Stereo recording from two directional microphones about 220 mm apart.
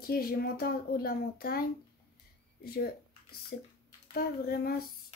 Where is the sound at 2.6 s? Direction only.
45° left (ahead or behind).